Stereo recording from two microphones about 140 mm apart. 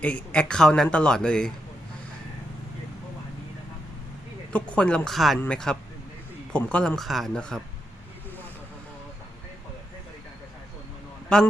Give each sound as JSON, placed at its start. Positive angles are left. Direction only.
{"t": 0.0, "sound": "speech", "side_deg": 10}
{"t": 4.5, "sound": "speech", "side_deg": 10}
{"t": 11.3, "sound": "speech", "side_deg": 5}